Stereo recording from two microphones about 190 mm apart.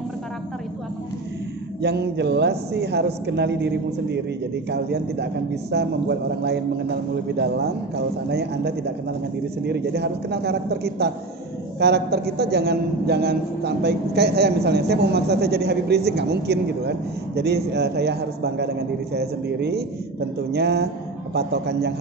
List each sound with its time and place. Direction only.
1.8 s a man's voice: 65° right (ahead or behind)